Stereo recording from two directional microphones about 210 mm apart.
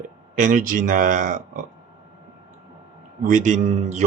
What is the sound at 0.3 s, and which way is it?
Speech, 40° right (ahead or behind).